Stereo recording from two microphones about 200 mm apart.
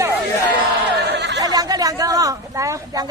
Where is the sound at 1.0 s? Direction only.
60° right (ahead or behind).